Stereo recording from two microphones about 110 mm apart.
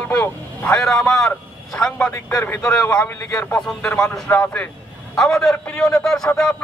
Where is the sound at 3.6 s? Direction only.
5° left (ahead or behind).